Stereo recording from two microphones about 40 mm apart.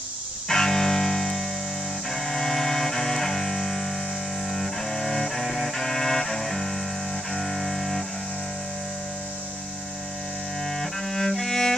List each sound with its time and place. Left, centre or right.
0.5 s music: centre
10.6 s cello: centre